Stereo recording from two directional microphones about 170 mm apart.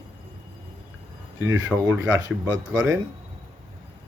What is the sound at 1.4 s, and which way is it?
Speech, 15° right (ahead or behind).